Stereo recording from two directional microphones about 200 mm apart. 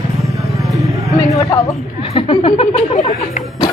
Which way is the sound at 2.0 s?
25° left (ahead or behind).